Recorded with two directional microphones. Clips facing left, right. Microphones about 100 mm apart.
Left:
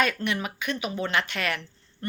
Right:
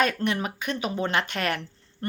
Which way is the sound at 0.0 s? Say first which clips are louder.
Right 2 dB; 40° right (ahead or behind).